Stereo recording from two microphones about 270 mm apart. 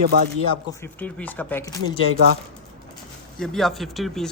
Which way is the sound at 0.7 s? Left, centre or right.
Centre.